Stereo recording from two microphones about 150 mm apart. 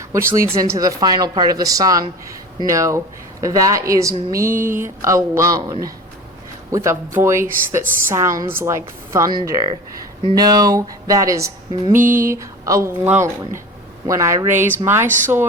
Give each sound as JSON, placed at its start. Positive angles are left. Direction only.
{"t": 0.1, "sound": "a woman's voice", "side_deg": -20}